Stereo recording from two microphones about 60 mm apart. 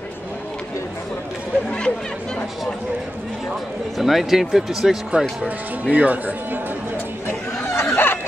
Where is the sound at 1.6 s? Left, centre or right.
Centre.